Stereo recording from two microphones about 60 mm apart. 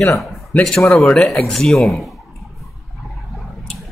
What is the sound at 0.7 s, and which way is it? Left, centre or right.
A man's voice, centre.